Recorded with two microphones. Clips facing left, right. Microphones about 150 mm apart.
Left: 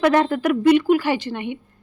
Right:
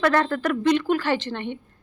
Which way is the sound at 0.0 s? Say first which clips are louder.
Left 4 dB; 15° left (ahead or behind).